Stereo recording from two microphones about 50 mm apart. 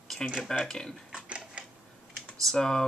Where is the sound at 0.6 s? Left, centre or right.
Centre.